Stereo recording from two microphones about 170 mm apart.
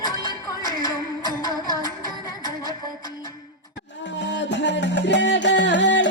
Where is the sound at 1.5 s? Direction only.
20° left (ahead or behind).